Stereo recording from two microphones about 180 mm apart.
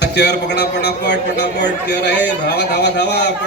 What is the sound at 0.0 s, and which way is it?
A man's voice, 70° left (ahead or behind).